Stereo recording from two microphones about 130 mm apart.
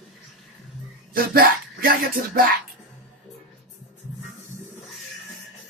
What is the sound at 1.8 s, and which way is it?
Speech, 90° right.